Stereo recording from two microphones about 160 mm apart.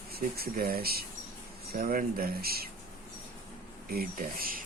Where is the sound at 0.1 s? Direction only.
70° right (ahead or behind).